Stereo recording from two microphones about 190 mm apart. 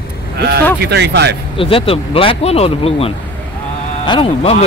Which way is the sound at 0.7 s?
60° right (ahead or behind).